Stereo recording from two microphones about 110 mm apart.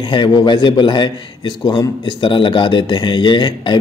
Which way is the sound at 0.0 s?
45° left (ahead or behind).